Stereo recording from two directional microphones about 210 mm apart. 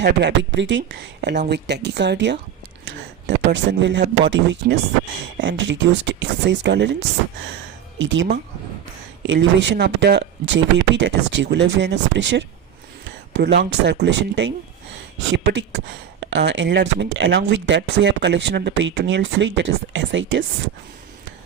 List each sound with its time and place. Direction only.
0.0 s speech: 55° right (ahead or behind)
7.9 s speech: 60° right (ahead or behind)